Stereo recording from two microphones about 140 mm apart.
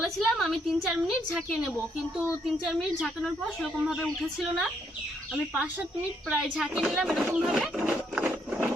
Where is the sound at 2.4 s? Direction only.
Centre (ahead or behind).